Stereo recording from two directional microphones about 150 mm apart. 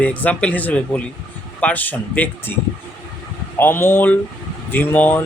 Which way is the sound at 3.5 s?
15° left (ahead or behind).